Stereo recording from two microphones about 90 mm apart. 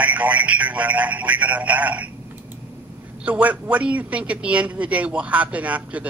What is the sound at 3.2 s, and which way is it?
Speech, 15° right (ahead or behind).